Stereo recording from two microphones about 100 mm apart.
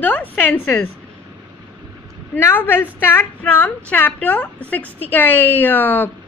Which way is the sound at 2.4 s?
20° left (ahead or behind).